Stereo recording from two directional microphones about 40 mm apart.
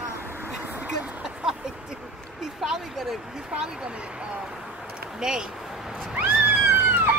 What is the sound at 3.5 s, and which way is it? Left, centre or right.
Speech, right.